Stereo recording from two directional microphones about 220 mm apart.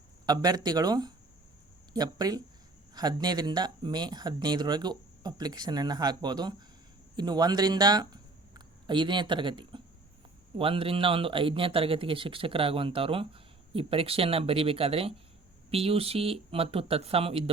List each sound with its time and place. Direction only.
0.3 s speech: 15° right (ahead or behind)